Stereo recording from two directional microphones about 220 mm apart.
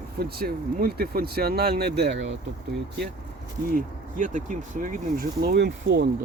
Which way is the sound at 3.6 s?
40° right (ahead or behind).